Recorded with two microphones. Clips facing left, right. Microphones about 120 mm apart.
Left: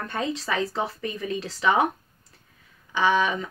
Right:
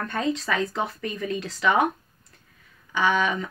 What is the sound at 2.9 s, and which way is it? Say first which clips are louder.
Speech: left 1 dB; 30° left (ahead or behind).